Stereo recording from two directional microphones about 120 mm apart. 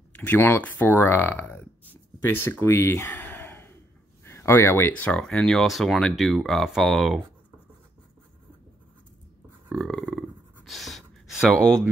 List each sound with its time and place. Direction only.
0.1 s speech: 15° left (ahead or behind)
5.1 s speech: 5° left (ahead or behind)
9.7 s a sound: centre (ahead or behind)